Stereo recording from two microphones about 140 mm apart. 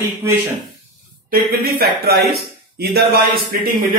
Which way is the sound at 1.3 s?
90° right.